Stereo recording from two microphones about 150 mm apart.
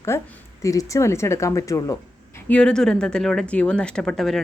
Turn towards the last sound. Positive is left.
turn(degrees=0)  # may be behind; listen again after turning